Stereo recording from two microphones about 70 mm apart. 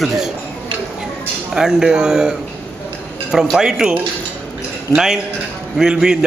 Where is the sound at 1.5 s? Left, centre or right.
Centre.